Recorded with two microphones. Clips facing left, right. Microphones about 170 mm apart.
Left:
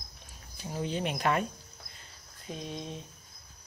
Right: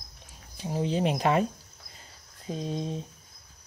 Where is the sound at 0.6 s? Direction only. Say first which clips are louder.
Right 6 dB; 30° right (ahead or behind).